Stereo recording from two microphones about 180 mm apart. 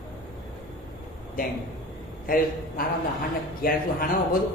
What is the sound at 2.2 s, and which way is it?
A woman's voice, 50° left (ahead or behind).